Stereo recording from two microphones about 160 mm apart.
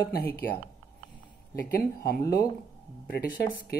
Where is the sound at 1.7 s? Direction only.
70° left (ahead or behind).